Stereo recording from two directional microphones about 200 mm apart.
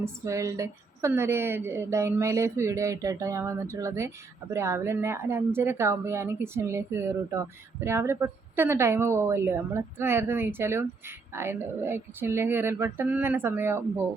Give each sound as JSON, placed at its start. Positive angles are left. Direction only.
{"t": 0.0, "sound": "speech", "side_deg": -15}